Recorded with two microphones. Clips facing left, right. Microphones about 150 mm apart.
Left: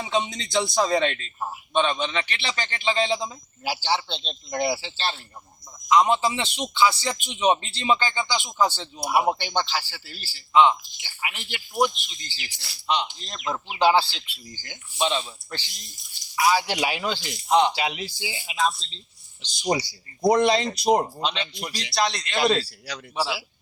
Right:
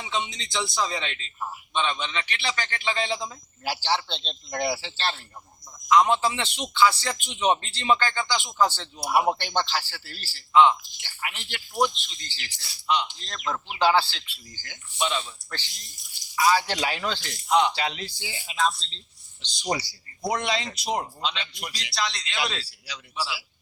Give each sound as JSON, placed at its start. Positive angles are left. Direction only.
{"t": 0.0, "sound": "a man's voice", "side_deg": 40}
{"t": 3.6, "sound": "a man's voice", "side_deg": 5}
{"t": 5.9, "sound": "a man's voice", "side_deg": 15}
{"t": 10.5, "sound": "a man's voice", "side_deg": 15}
{"t": 11.0, "sound": "a man's voice", "side_deg": 5}
{"t": 14.9, "sound": "a man's voice", "side_deg": 30}
{"t": 15.4, "sound": "a man's voice", "side_deg": 20}
{"t": 17.5, "sound": "a man's voice", "side_deg": 30}
{"t": 17.7, "sound": "a man's voice", "side_deg": 10}
{"t": 20.2, "sound": "a man's voice", "side_deg": 35}
{"t": 21.4, "sound": "a man's voice", "side_deg": 30}
{"t": 21.9, "sound": "a man's voice", "side_deg": 50}